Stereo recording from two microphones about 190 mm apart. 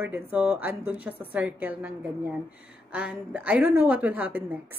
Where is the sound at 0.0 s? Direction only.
10° right (ahead or behind).